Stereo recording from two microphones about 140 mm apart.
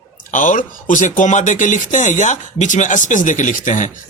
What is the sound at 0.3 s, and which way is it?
Speech, 65° left (ahead or behind).